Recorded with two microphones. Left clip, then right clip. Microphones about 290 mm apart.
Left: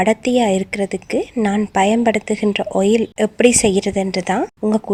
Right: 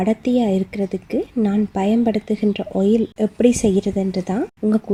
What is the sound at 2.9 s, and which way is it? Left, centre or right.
Speech, left.